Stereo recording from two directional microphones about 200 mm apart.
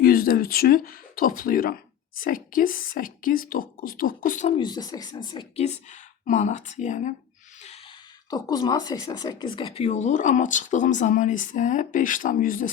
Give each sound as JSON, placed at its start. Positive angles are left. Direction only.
{"t": 0.0, "sound": "speech", "side_deg": 45}
{"t": 4.5, "sound": "speech", "side_deg": 20}
{"t": 8.3, "sound": "speech", "side_deg": 20}